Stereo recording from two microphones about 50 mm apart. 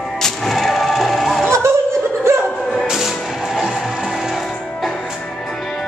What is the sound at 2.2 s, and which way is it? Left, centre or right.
Music, right.